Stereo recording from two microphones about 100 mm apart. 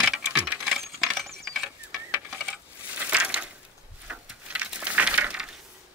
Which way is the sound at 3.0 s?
10° right (ahead or behind).